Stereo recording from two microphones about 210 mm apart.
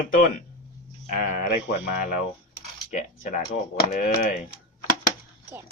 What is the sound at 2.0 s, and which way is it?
Speech, 40° left (ahead or behind).